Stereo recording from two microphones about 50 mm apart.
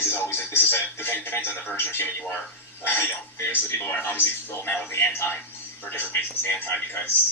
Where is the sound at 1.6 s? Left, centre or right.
Left.